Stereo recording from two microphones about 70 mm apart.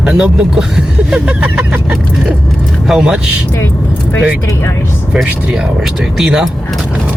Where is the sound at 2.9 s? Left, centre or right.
Centre.